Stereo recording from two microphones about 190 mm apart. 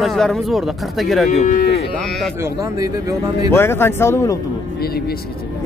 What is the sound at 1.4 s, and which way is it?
Moo, 40° left (ahead or behind).